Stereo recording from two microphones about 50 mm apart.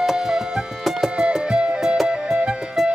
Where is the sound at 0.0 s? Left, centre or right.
Centre.